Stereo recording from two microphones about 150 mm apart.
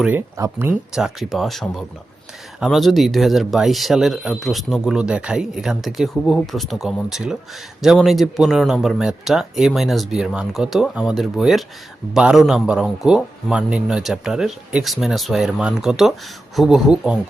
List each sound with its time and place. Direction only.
0.3 s speech: 20° right (ahead or behind)
0.9 s speech: centre (ahead or behind)